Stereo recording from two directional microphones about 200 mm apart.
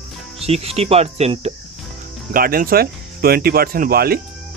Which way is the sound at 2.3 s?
45° right (ahead or behind).